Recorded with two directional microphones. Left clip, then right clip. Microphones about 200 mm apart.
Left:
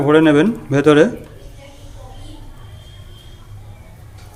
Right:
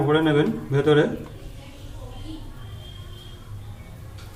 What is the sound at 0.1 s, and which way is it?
Speech, 60° left (ahead or behind).